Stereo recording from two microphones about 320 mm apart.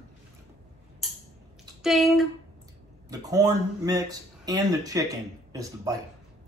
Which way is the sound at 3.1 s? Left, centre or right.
Centre.